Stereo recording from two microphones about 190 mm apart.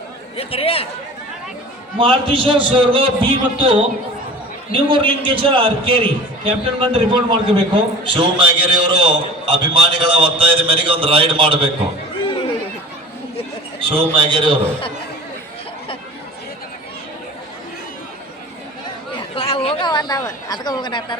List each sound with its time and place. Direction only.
0.3 s speech: 30° left (ahead or behind)
2.0 s a man's voice: 30° right (ahead or behind)
13.7 s a man's voice: 25° right (ahead or behind)
19.4 s a sound: 30° left (ahead or behind)
20.5 s speech: 20° left (ahead or behind)